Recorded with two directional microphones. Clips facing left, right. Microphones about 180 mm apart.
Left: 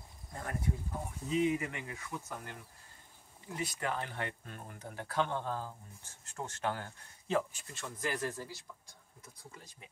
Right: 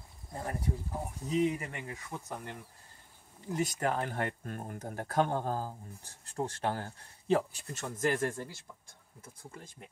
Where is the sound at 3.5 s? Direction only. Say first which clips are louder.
Right 6 dB; 45° right (ahead or behind).